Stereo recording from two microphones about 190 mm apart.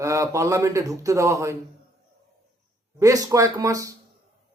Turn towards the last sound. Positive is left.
turn(degrees=-15)  # may be behind; listen again after turning